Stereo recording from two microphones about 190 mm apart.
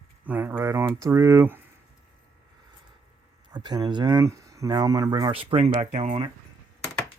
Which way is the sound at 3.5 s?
20° right (ahead or behind).